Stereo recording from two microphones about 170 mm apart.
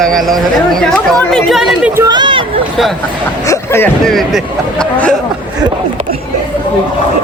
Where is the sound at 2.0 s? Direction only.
25° right (ahead or behind).